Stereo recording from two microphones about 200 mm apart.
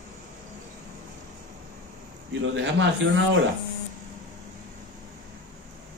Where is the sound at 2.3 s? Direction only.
65° right (ahead or behind).